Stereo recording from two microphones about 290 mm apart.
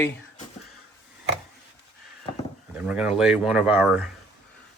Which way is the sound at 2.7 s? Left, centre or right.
Centre.